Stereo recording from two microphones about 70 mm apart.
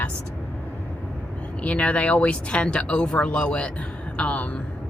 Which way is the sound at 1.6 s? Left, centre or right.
Centre.